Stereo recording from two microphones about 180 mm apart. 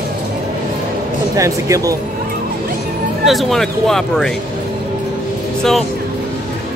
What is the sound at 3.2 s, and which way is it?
Speech, centre (ahead or behind).